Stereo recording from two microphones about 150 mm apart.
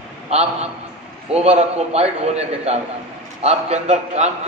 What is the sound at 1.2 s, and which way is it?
A man's voice, 45° right (ahead or behind).